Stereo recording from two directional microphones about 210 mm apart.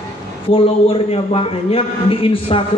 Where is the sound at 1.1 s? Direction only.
25° left (ahead or behind).